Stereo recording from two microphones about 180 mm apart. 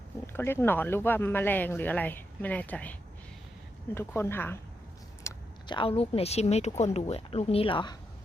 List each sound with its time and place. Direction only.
0.3 s speech: 15° left (ahead or behind)
3.9 s speech: 15° left (ahead or behind)
5.2 s speech: 25° left (ahead or behind)